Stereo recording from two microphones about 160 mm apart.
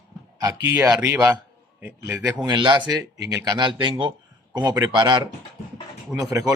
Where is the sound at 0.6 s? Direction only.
20° right (ahead or behind).